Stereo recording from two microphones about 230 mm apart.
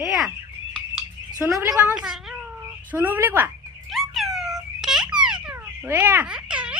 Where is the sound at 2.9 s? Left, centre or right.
Centre.